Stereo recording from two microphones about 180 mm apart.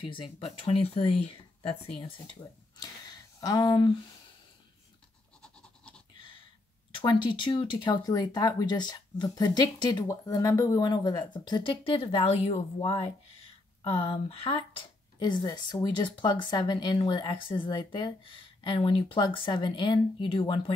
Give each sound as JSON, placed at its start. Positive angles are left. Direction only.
{"t": 0.0, "sound": "speech", "side_deg": 30}
{"t": 2.8, "sound": "a sound", "side_deg": 20}
{"t": 5.4, "sound": "goat", "side_deg": 5}
{"t": 6.9, "sound": "speech", "side_deg": 30}